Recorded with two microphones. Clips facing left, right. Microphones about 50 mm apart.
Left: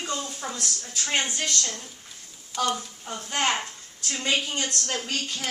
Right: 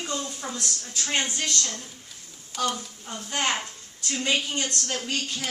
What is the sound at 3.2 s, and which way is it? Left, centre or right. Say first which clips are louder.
Speech: left 1 dB; centre.